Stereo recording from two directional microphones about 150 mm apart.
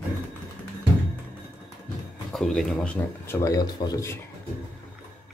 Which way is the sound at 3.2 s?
20° left (ahead or behind).